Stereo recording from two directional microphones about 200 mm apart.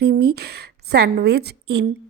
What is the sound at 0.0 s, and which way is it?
Speech, 55° right (ahead or behind).